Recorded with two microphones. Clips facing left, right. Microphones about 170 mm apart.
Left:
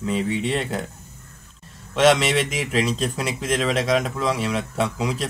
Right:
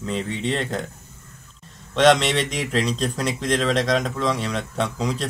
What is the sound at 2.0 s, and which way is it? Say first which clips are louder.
Speech: even; 5° left (ahead or behind).